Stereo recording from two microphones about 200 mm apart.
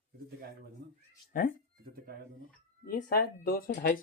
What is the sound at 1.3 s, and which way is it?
Speech, 45° left (ahead or behind).